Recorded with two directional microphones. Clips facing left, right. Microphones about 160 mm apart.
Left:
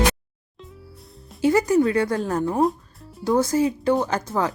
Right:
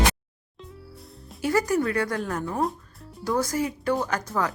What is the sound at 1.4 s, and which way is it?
Speech, 20° left (ahead or behind).